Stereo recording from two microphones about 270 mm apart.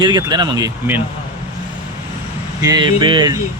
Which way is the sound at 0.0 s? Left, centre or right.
Centre.